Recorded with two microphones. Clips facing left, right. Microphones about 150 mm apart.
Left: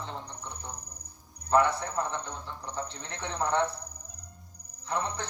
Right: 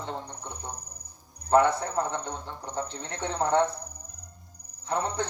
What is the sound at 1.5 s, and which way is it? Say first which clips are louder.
A man's voice: right 3 dB; 25° right (ahead or behind).